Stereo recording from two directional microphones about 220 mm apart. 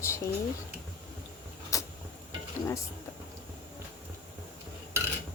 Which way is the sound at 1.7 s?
15° left (ahead or behind).